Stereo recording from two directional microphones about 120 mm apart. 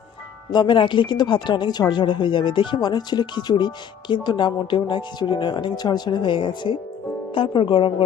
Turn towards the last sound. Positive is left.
turn(degrees=45)  # may be behind; listen again after turning